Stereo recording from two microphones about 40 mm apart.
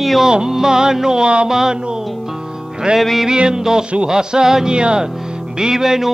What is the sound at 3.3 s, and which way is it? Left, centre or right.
Speech, centre.